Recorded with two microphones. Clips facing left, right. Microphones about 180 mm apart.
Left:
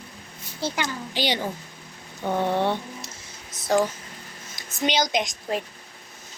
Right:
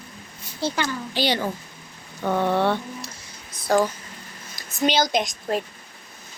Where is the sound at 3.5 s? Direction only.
20° left (ahead or behind).